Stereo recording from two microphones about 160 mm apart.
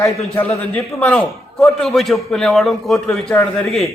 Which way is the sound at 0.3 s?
10° left (ahead or behind).